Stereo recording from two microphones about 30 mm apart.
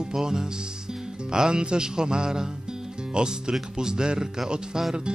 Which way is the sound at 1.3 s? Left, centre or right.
Right.